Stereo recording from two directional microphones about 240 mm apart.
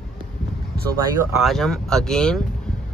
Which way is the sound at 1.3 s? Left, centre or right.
Centre.